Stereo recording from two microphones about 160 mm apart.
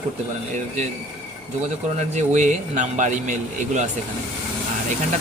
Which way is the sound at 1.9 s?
45° right (ahead or behind).